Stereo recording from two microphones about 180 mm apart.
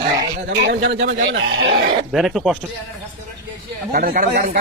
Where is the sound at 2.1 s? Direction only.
Centre (ahead or behind).